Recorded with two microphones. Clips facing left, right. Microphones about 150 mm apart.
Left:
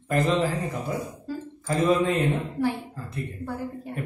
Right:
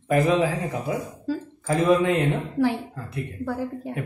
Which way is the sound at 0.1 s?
80° right.